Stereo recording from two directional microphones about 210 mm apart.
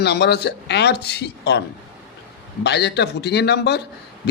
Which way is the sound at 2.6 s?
55° left (ahead or behind).